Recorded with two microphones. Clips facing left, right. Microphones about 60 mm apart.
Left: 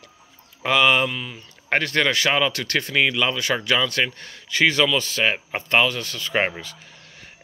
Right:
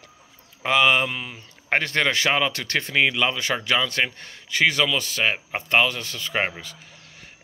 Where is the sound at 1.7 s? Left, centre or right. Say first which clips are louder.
Left 1 dB; centre.